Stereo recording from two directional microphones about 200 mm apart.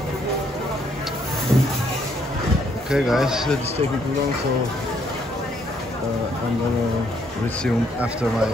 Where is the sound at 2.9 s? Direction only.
Centre (ahead or behind).